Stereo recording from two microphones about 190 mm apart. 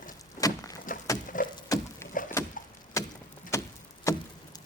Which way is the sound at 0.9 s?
45° left (ahead or behind).